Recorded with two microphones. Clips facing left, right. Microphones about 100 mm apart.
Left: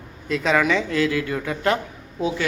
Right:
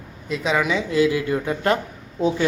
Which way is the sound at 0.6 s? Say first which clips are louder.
Right 1 dB; 20° right (ahead or behind).